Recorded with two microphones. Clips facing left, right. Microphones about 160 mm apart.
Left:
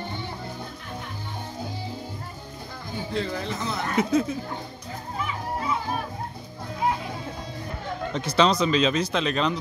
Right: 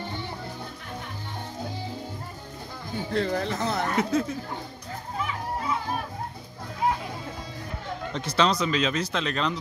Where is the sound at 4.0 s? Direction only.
15° left (ahead or behind).